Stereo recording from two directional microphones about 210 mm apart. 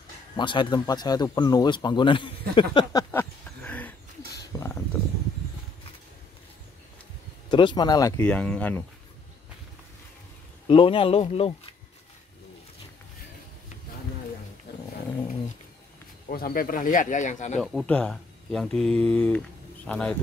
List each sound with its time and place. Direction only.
0.4 s speech: 20° left (ahead or behind)
2.5 s a sound: 20° left (ahead or behind)
7.5 s speech: 20° left (ahead or behind)
8.2 s speech: 5° left (ahead or behind)
10.7 s speech: 25° left (ahead or behind)
14.7 s dog: 50° left (ahead or behind)
16.3 s speech: 45° left (ahead or behind)
17.6 s speech: 5° left (ahead or behind)